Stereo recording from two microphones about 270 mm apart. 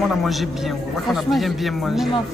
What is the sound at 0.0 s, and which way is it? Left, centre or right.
Speech, centre.